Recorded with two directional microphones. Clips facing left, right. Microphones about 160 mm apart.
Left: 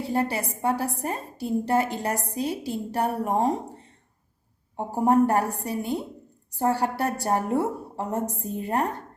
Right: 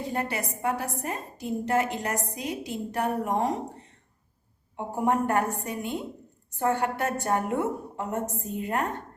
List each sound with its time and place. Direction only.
0.1 s a woman's voice: 30° left (ahead or behind)
5.0 s a woman's voice: 35° left (ahead or behind)